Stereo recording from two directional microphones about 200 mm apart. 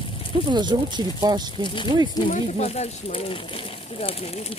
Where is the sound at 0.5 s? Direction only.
20° right (ahead or behind).